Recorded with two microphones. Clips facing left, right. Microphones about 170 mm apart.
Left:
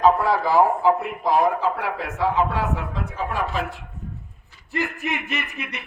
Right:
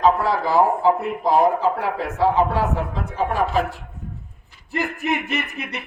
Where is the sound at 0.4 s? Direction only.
30° right (ahead or behind).